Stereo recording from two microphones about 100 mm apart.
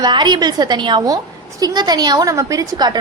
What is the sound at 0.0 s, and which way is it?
A woman's voice, 50° right (ahead or behind).